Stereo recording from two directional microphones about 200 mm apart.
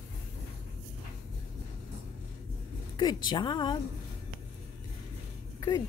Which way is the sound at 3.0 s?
20° left (ahead or behind).